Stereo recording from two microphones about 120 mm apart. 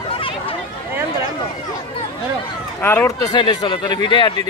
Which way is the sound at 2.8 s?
20° left (ahead or behind).